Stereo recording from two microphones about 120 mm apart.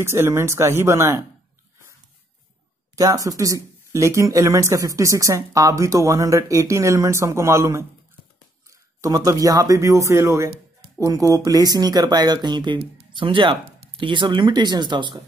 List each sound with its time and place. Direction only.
0.0 s speech: 20° right (ahead or behind)
3.0 s speech: 30° right (ahead or behind)